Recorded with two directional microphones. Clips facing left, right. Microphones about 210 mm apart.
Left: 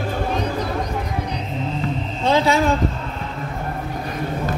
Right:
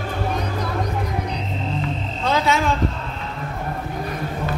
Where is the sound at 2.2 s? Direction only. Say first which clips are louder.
Left 3 dB; 30° left (ahead or behind).